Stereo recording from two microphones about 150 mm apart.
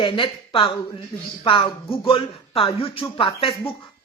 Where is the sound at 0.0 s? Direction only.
35° left (ahead or behind).